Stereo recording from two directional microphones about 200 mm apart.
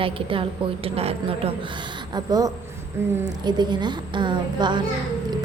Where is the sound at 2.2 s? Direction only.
20° right (ahead or behind).